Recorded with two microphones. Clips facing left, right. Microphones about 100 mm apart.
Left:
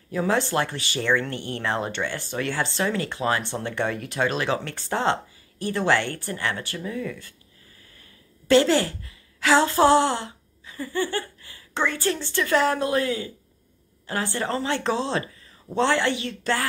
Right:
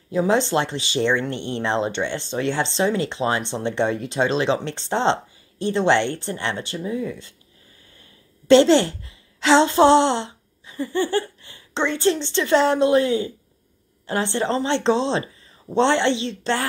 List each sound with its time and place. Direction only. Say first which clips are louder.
0.1 s speech: right 4 dB; 20° right (ahead or behind)
8.5 s a woman's voice: right 5 dB; 25° right (ahead or behind)